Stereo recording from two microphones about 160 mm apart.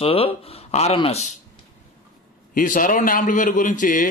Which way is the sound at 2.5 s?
55° left (ahead or behind).